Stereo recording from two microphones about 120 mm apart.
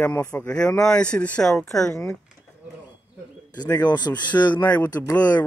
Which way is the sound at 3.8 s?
35° left (ahead or behind).